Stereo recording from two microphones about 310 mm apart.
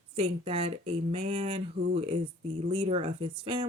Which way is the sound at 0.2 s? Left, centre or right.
Centre.